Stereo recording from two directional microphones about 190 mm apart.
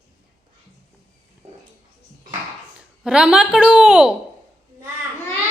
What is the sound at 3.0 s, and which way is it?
Speech, 5° right (ahead or behind).